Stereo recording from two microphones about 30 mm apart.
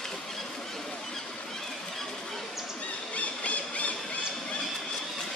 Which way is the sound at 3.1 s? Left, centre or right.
Left.